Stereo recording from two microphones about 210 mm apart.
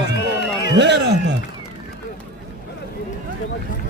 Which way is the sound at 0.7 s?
55° right (ahead or behind).